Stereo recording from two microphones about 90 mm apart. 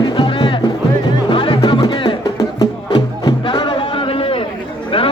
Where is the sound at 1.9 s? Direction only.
70° left (ahead or behind); by 4.5 s 90° left.